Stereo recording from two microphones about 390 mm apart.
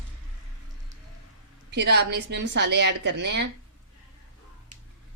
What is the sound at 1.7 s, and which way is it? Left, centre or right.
Speech, right.